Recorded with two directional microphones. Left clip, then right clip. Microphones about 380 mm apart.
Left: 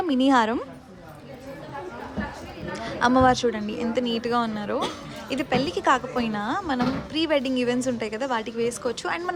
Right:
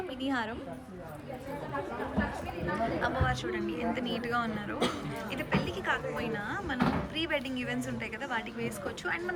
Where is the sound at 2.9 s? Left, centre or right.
Centre.